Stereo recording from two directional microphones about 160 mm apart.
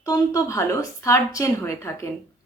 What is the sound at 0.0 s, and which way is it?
A woman's voice, 20° left (ahead or behind).